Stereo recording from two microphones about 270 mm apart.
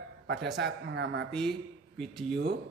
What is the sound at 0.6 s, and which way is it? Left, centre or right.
Speech, right.